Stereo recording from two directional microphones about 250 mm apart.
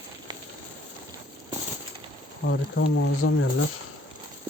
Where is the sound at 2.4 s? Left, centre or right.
Left.